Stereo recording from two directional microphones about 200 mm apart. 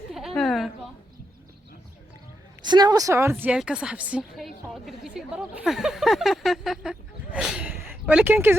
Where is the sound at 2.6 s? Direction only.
20° right (ahead or behind).